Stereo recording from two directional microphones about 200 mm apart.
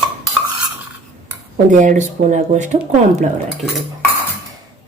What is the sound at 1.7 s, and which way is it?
Speech, 40° right (ahead or behind).